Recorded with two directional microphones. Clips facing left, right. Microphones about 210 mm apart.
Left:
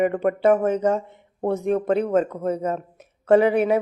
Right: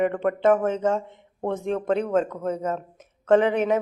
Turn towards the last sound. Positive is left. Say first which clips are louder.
# left 2 dB
turn(degrees=10)  # may be behind; listen again after turning